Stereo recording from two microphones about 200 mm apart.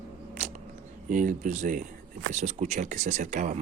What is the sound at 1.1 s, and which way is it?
Speech, 40° right (ahead or behind).